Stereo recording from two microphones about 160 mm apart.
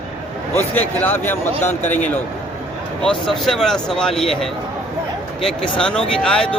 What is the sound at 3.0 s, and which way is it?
Speech, 5° left (ahead or behind).